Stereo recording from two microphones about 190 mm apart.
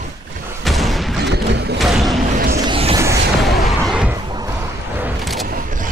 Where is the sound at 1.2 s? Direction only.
60° right (ahead or behind).